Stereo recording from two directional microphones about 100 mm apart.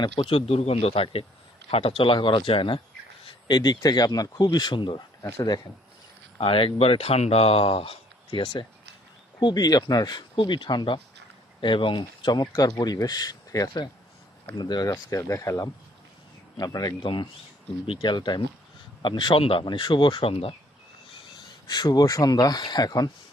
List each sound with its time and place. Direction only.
0.0 s speech: 60° left (ahead or behind)
5.2 s a man's voice: 40° left (ahead or behind)
6.4 s speech: 60° left (ahead or behind)
9.4 s a man's voice: 45° left (ahead or behind)
14.9 s a man's voice: 30° left (ahead or behind)
17.0 s speech: 55° left (ahead or behind)
21.7 s a man's voice: 45° left (ahead or behind)